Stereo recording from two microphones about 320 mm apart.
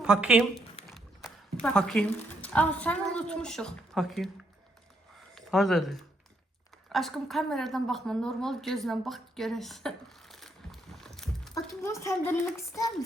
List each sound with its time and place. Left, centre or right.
0.0 s a woman's voice: centre
5.3 s a woman's voice: centre
10.4 s a sound: centre